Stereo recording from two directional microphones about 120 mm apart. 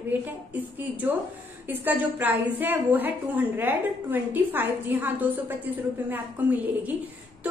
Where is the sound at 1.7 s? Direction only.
15° right (ahead or behind).